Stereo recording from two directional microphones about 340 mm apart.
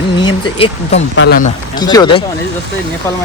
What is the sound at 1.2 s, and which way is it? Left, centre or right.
Speech, left.